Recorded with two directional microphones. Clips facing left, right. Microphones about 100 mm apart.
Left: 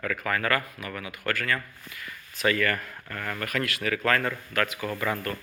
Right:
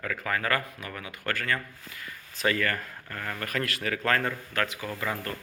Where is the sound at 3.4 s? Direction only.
35° right (ahead or behind).